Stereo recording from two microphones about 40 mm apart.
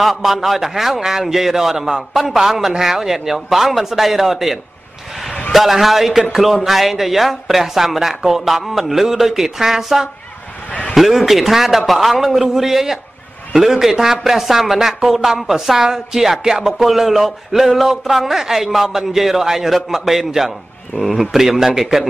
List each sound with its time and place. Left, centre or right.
0.0 s a man's voice: centre
10.7 s a sound: left
11.0 s a man's voice: centre